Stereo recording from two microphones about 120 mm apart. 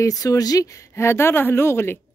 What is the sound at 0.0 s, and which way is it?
Speech, 30° left (ahead or behind).